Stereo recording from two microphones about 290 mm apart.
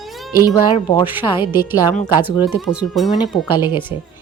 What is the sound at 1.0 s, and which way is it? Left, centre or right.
Speech, centre.